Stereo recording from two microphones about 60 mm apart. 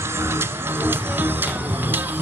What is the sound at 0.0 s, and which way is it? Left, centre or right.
Music, right.